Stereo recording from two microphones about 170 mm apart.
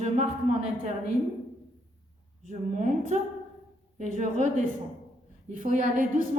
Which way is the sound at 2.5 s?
45° right (ahead or behind).